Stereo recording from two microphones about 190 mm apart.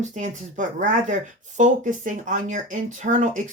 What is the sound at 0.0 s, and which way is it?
Speech, 40° right (ahead or behind).